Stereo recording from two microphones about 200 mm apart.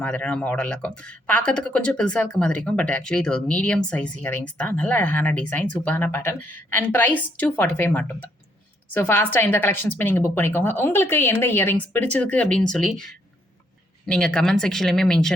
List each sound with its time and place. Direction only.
0.0 s speech: 5° left (ahead or behind)
14.1 s speech: 5° left (ahead or behind)